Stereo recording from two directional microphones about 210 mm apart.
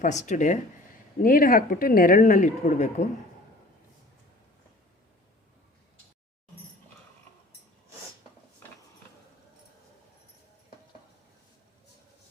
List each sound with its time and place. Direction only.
0.0 s speech: 35° left (ahead or behind)